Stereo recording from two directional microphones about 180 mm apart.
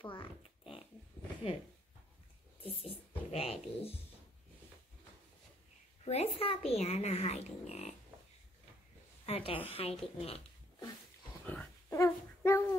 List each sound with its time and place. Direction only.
0.0 s oink: 30° left (ahead or behind)
2.6 s speech: 30° left (ahead or behind)
6.0 s speech: 35° left (ahead or behind)
9.2 s speech: 30° left (ahead or behind)
11.4 s dog: 10° left (ahead or behind)